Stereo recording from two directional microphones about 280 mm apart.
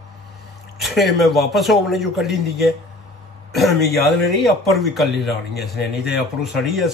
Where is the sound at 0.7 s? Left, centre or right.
Centre.